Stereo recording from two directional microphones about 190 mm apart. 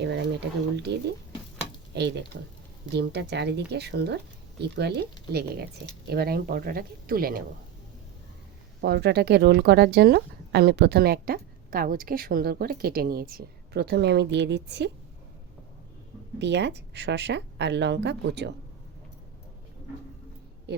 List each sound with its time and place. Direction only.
0.0 s speech: 65° right (ahead or behind)
8.8 s speech: 60° right (ahead or behind)
16.4 s speech: 65° right (ahead or behind)